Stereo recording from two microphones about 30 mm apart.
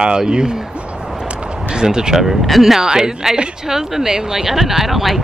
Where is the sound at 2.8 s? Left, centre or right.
Right.